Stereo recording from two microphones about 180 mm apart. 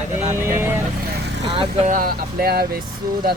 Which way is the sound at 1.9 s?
50° right (ahead or behind).